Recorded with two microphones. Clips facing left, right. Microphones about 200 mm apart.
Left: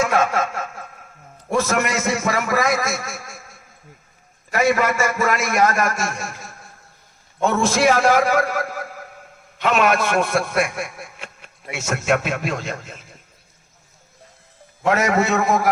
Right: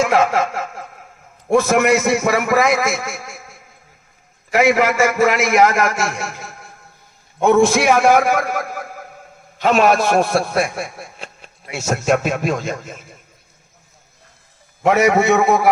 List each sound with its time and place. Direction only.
1.5 s a man's voice: 60° right (ahead or behind)
4.5 s a man's voice: 85° right
7.4 s a man's voice: 60° right (ahead or behind)
9.6 s a man's voice: 40° right (ahead or behind)
14.8 s a man's voice: 65° right (ahead or behind)